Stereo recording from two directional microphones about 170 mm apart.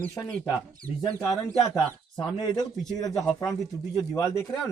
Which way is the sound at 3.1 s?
Centre (ahead or behind).